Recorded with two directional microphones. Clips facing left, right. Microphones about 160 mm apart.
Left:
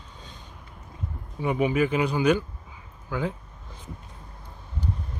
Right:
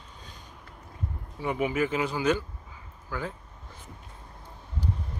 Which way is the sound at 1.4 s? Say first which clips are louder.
Left 4 dB; 20° left (ahead or behind).